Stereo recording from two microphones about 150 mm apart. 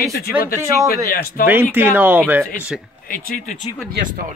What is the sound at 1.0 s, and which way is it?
Speech, 80° left.